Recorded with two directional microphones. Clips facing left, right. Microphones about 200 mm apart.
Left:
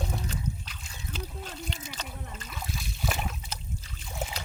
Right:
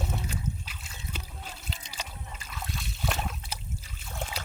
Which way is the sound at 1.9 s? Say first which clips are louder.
Left 2 dB; 10° right (ahead or behind).